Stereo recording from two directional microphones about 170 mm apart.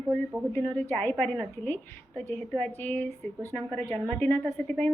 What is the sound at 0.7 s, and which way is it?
A woman's voice, 10° left (ahead or behind).